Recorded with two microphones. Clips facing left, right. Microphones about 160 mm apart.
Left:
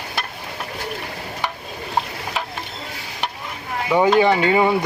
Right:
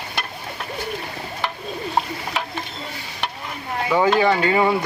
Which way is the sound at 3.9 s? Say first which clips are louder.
Left 2 dB; 15° left (ahead or behind).